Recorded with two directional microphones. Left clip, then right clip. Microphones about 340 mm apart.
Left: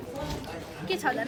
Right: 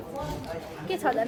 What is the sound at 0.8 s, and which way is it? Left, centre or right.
Speech, right.